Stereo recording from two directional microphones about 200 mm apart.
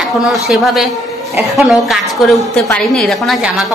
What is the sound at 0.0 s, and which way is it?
A woman's voice, centre (ahead or behind).